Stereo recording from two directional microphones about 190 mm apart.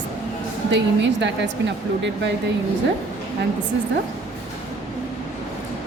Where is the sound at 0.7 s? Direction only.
70° right (ahead or behind).